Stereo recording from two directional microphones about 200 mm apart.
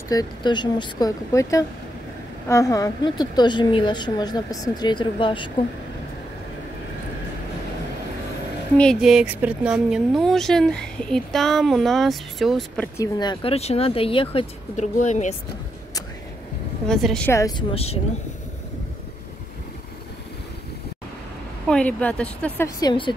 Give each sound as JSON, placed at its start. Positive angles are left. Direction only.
{"t": 0.1, "sound": "a woman's voice", "side_deg": 20}
{"t": 8.7, "sound": "speech", "side_deg": 0}
{"t": 16.8, "sound": "speech", "side_deg": 5}
{"t": 17.3, "sound": "a woman's voice", "side_deg": 15}
{"t": 21.6, "sound": "speech", "side_deg": 5}
{"t": 22.8, "sound": "a woman's voice", "side_deg": 20}